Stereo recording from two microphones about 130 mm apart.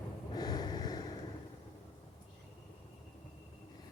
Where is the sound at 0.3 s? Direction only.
30° left (ahead or behind).